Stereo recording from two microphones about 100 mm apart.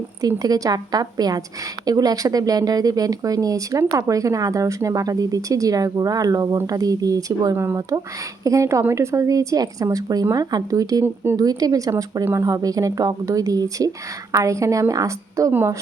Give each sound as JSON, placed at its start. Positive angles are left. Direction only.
{"t": 0.2, "sound": "speech", "side_deg": -40}
{"t": 7.5, "sound": "speech", "side_deg": -25}
{"t": 11.0, "sound": "speech", "side_deg": -25}
{"t": 11.3, "sound": "speech", "side_deg": -40}